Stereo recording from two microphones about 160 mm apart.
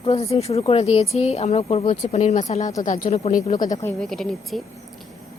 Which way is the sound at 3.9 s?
5° left (ahead or behind).